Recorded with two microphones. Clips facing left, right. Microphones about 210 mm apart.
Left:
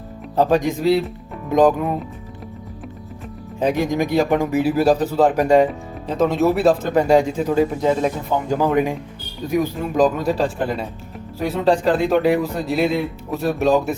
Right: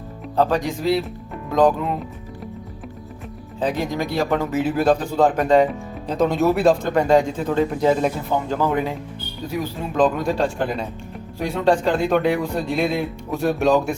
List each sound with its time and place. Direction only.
0.3 s speech: 20° left (ahead or behind)
3.6 s speech: 15° left (ahead or behind); by 8.1 s centre (ahead or behind)
8.4 s speech: 15° left (ahead or behind)